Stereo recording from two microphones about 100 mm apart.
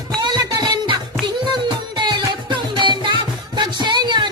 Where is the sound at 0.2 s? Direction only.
45° right (ahead or behind).